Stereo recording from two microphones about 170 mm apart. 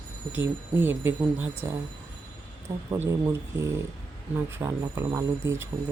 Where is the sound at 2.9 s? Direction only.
15° right (ahead or behind).